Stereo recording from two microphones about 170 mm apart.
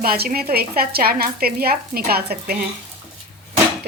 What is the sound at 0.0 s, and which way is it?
Stir, 60° right (ahead or behind).